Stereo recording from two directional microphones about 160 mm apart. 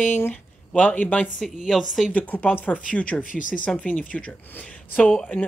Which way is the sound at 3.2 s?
55° left (ahead or behind).